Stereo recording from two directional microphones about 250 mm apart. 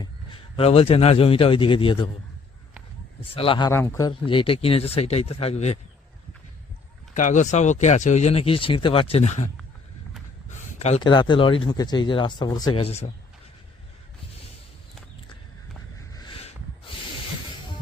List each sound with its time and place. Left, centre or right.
0.5 s speech: left
3.3 s speech: left
7.1 s speech: left
10.8 s speech: left
16.1 s a sound: centre